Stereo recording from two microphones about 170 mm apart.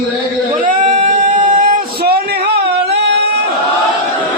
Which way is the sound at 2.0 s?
65° right (ahead or behind).